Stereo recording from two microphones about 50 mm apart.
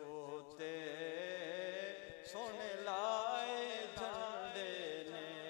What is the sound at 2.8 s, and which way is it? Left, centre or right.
Music, left.